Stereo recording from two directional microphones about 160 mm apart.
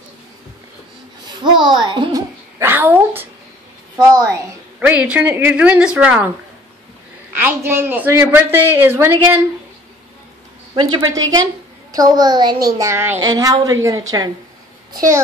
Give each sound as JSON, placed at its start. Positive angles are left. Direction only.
{"t": 1.2, "sound": "babbling", "side_deg": -30}
{"t": 2.6, "sound": "a sound", "side_deg": -10}
{"t": 4.7, "sound": "speech", "side_deg": -5}
{"t": 7.3, "sound": "speech", "side_deg": -15}
{"t": 10.8, "sound": "a woman's voice", "side_deg": -25}